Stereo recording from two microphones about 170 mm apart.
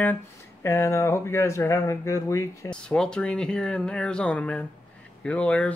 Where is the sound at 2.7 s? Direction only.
5° left (ahead or behind).